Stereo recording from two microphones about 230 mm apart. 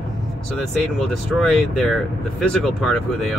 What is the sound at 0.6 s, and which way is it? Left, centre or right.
Speech, centre.